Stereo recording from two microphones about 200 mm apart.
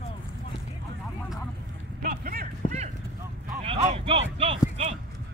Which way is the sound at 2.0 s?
45° right (ahead or behind).